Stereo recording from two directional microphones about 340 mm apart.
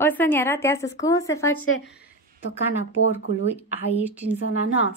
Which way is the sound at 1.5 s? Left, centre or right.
Left.